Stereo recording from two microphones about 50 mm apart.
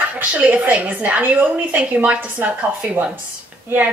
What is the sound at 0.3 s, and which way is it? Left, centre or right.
A woman's voice, right.